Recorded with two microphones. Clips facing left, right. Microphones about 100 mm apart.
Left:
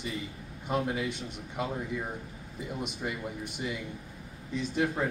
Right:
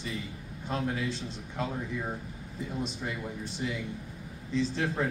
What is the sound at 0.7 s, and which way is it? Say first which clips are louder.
Speech: left 1 dB; 15° left (ahead or behind).